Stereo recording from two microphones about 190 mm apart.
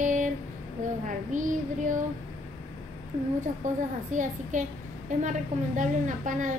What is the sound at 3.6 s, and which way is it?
A child's voice, 40° right (ahead or behind).